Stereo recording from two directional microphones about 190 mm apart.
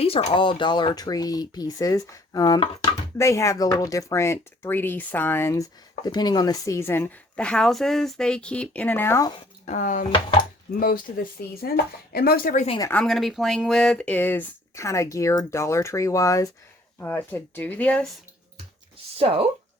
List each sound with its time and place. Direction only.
0.0 s speech: 30° left (ahead or behind); by 9.3 s 15° left (ahead or behind)
9.6 s speech: 40° left (ahead or behind)
12.6 s speech: 25° left (ahead or behind)
12.9 s speech: 5° left (ahead or behind)
18.9 s music: 30° right (ahead or behind)